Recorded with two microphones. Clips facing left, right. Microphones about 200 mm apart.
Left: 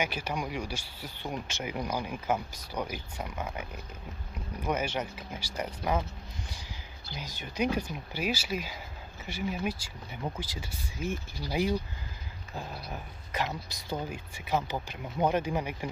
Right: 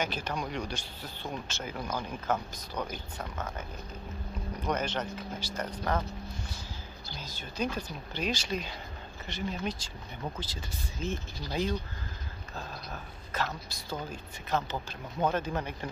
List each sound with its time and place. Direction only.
0.0 s speech: 10° left (ahead or behind)
4.6 s speech: 10° left (ahead or behind)
7.2 s speech: 15° left (ahead or behind)